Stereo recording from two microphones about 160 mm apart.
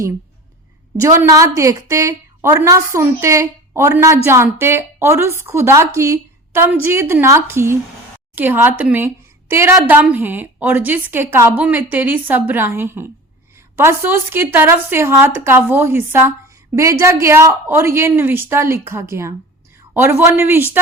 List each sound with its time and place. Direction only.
0.9 s a woman's voice: 20° right (ahead or behind)